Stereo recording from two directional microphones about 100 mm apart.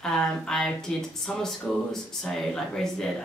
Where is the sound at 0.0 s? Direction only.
5° left (ahead or behind).